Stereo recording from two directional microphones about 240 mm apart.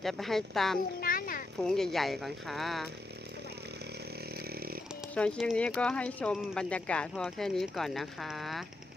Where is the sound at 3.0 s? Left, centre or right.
Right.